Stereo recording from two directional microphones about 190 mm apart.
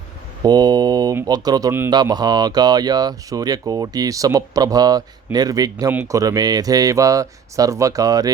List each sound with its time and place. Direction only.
0.4 s speech: 20° right (ahead or behind)